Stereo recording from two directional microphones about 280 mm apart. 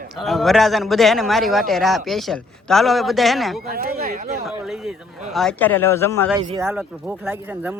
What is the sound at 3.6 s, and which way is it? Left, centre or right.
Speech, right.